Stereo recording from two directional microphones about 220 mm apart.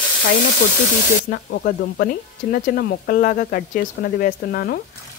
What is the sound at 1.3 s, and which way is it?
Speech, 45° left (ahead or behind).